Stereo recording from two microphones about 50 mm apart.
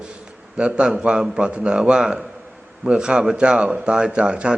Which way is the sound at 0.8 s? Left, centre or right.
Centre.